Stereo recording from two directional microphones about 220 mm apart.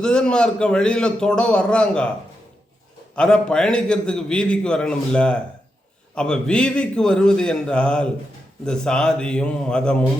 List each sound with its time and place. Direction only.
0.0 s a man's voice: 5° left (ahead or behind)
3.2 s a man's voice: 5° left (ahead or behind)